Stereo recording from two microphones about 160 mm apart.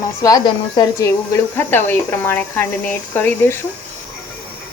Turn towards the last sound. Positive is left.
turn(degrees=10)  # may be behind; listen again after turning